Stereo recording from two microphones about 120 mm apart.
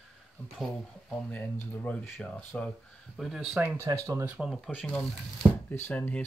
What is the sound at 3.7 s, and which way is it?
Speech, 25° right (ahead or behind).